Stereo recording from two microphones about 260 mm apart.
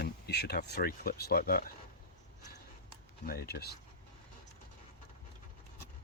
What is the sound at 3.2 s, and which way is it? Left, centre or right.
Speech, left.